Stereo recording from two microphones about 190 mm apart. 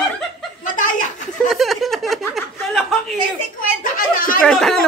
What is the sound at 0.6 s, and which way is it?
Chuckle, 45° left (ahead or behind).